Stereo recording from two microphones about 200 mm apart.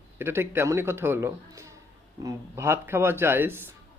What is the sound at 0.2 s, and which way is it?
A man's voice, 10° right (ahead or behind).